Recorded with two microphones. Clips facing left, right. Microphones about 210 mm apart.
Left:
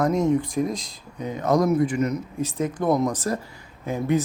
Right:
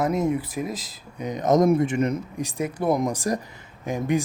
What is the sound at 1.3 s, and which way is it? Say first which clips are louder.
Speech: right 2 dB; 20° right (ahead or behind).